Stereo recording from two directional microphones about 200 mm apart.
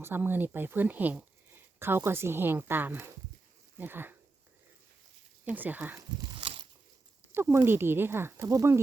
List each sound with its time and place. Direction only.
0.0 s speech: 10° right (ahead or behind)
5.5 s speech: 10° right (ahead or behind)
6.3 s a sound: 25° right (ahead or behind)
7.3 s speech: 10° right (ahead or behind)